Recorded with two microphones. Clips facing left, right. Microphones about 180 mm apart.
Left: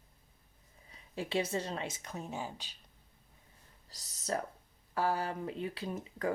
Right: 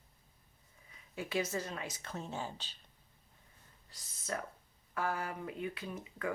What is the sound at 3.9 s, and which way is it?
Speech, 40° left (ahead or behind).